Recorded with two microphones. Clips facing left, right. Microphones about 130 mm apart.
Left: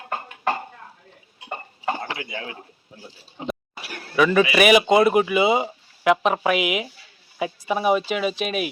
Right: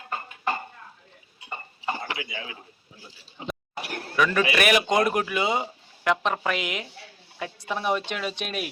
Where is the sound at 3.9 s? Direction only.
20° right (ahead or behind).